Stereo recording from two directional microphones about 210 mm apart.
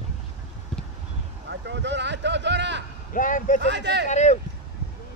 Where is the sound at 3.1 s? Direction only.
40° left (ahead or behind).